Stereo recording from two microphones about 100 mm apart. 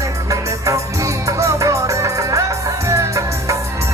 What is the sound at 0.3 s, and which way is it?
Music, 30° right (ahead or behind).